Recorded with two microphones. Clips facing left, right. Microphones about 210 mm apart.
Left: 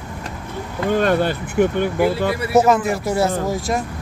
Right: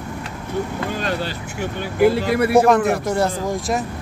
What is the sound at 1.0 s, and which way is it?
Speech, 55° left (ahead or behind).